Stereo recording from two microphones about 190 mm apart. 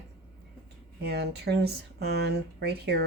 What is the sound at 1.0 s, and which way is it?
Speech, 60° right (ahead or behind).